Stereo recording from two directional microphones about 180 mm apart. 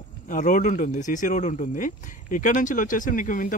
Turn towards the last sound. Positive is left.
turn(degrees=45)  # may be behind; listen again after turning